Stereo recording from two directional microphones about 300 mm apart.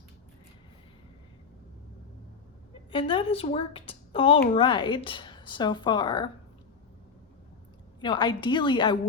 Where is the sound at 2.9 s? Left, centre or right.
Centre.